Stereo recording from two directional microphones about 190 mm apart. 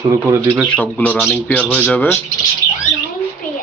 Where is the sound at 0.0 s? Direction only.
15° right (ahead or behind).